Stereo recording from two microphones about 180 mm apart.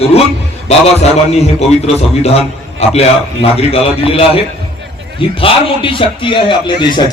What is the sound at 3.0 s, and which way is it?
A man's voice, 35° left (ahead or behind).